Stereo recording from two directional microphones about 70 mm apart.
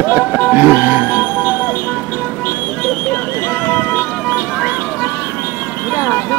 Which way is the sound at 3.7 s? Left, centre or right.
Left.